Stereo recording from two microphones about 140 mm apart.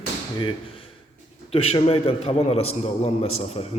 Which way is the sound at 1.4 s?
45° left (ahead or behind).